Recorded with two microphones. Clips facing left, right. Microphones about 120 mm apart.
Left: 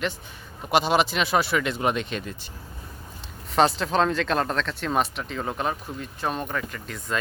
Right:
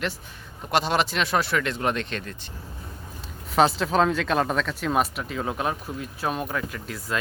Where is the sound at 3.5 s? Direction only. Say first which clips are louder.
Right 1 dB; centre (ahead or behind).